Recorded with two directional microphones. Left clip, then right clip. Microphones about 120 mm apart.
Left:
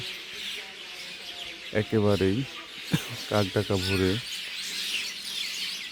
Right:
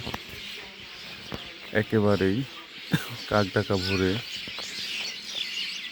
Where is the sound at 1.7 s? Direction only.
5° left (ahead or behind).